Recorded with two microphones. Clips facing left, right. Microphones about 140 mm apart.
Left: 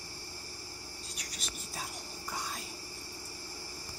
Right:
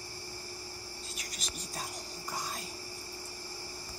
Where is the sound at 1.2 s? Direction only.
Centre (ahead or behind).